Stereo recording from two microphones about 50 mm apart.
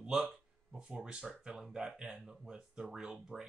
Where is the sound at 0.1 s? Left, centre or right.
Centre.